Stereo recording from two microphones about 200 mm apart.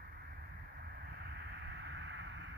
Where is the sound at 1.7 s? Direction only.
60° right (ahead or behind).